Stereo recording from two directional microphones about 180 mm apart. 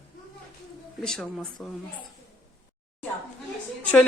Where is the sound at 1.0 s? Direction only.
5° left (ahead or behind).